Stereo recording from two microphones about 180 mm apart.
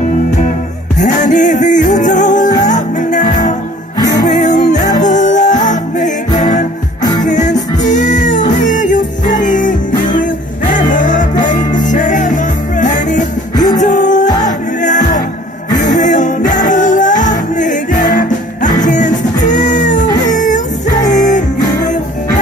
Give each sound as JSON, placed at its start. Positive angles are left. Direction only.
{"t": 0.9, "sound": "music", "side_deg": 45}
{"t": 7.0, "sound": "music", "side_deg": 20}
{"t": 7.2, "sound": "music", "side_deg": 45}